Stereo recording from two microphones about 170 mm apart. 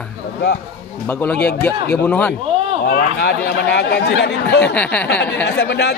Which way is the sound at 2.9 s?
70° left (ahead or behind).